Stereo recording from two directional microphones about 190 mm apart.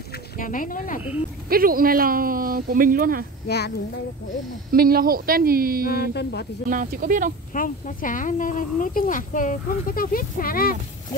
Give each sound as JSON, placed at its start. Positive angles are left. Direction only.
{"t": 0.4, "sound": "speech", "side_deg": 45}
{"t": 1.5, "sound": "speech", "side_deg": -50}
{"t": 3.4, "sound": "speech", "side_deg": 60}
{"t": 4.6, "sound": "speech", "side_deg": -50}
{"t": 5.9, "sound": "speech", "side_deg": 55}
{"t": 6.7, "sound": "speech", "side_deg": -45}
{"t": 7.5, "sound": "speech", "side_deg": 45}